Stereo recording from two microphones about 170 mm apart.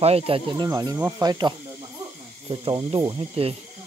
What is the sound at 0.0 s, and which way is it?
Speech, 35° right (ahead or behind).